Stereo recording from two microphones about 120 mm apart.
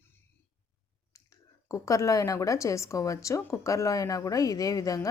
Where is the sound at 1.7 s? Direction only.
25° left (ahead or behind).